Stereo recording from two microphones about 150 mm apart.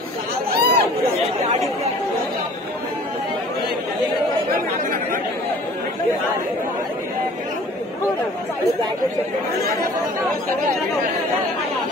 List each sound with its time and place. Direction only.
0.5 s chatter: 90° right